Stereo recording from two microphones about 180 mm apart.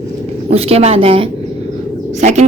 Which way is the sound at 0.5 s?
35° right (ahead or behind).